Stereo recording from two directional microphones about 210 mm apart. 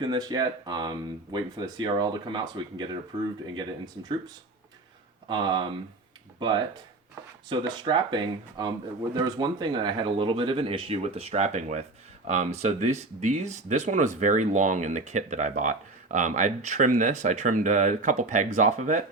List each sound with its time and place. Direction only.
0.0 s speech: 20° right (ahead or behind)
5.3 s speech: 25° right (ahead or behind)
7.5 s speech: 20° right (ahead or behind)